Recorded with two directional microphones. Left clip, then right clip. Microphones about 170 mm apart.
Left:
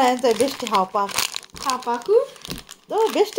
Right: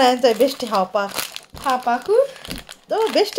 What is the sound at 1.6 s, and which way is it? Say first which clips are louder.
Speech: right 4 dB; 50° right (ahead or behind).